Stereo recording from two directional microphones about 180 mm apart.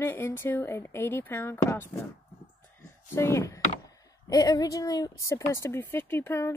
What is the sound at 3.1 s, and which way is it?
Speech, 15° left (ahead or behind).